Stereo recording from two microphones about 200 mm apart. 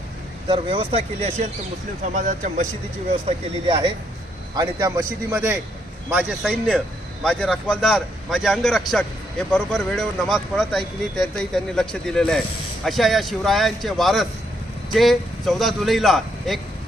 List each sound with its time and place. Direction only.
0.4 s speech: 25° right (ahead or behind)
3.2 s a man's voice: 25° right (ahead or behind); by 16.6 s centre (ahead or behind)